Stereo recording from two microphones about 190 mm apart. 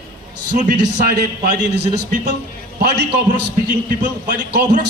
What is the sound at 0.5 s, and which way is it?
Speech, 45° right (ahead or behind).